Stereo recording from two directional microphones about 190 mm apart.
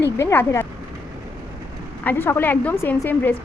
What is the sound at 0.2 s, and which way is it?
Speech, 15° left (ahead or behind).